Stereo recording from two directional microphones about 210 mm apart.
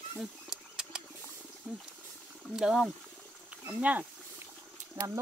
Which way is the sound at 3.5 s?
5° right (ahead or behind).